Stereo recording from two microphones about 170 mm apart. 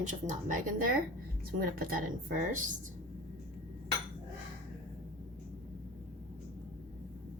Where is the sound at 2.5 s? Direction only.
50° right (ahead or behind).